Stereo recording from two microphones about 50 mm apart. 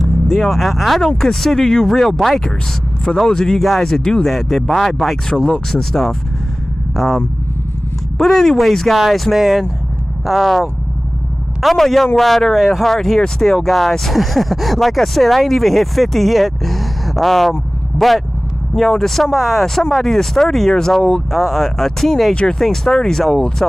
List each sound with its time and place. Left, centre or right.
0.3 s speech: centre
3.2 s speech: centre
22.3 s speech: left
22.6 s speech: centre